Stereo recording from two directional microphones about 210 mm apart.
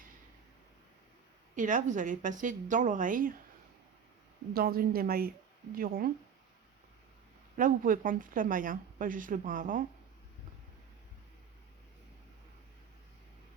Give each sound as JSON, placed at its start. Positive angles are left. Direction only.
{"t": 1.5, "sound": "speech", "side_deg": -40}
{"t": 4.5, "sound": "a woman's voice", "side_deg": -45}
{"t": 7.5, "sound": "speech", "side_deg": -40}